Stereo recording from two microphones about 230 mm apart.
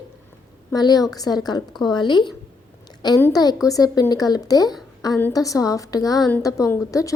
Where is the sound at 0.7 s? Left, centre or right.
Centre.